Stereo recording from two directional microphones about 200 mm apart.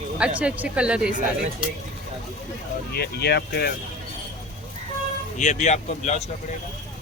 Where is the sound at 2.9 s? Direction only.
55° left (ahead or behind).